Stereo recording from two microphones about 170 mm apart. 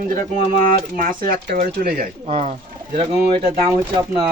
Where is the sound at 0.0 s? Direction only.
55° right (ahead or behind).